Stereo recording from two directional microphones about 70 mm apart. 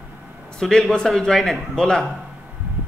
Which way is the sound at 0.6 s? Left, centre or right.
Centre.